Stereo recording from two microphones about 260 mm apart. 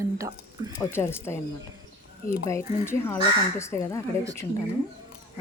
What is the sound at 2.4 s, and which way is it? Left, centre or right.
Speech, centre.